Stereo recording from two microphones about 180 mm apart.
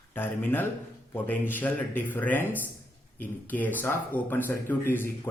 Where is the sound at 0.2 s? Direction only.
10° left (ahead or behind).